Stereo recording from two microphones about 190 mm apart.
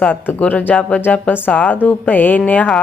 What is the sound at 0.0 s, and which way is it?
Speech, 10° left (ahead or behind).